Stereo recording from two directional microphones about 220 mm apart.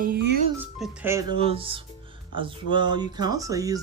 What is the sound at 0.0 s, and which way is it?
Speech, 45° right (ahead or behind).